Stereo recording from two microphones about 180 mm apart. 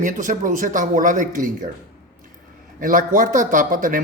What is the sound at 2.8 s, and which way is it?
A man's voice, 50° right (ahead or behind).